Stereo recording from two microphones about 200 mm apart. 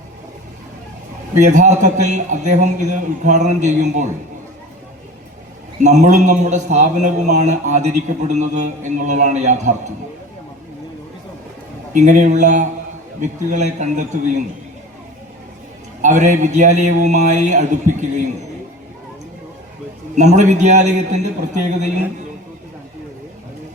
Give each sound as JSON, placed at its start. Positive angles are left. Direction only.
{"t": 1.4, "sound": "a man's voice", "side_deg": -35}
{"t": 5.8, "sound": "a man's voice", "side_deg": -35}
{"t": 11.9, "sound": "a man's voice", "side_deg": -40}
{"t": 16.0, "sound": "a man's voice", "side_deg": -40}
{"t": 20.1, "sound": "a man's voice", "side_deg": -35}